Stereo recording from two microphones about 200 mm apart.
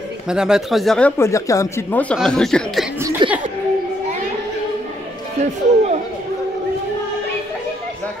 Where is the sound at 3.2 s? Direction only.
25° right (ahead or behind).